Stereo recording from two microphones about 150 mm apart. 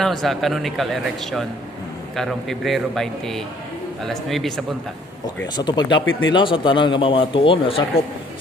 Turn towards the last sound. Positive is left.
turn(degrees=35)  # may be behind; listen again after turning